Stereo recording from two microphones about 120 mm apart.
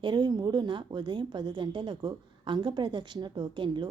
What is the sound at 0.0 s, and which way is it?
A woman's voice, 40° right (ahead or behind).